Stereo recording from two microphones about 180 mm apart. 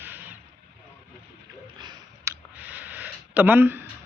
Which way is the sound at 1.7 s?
25° right (ahead or behind).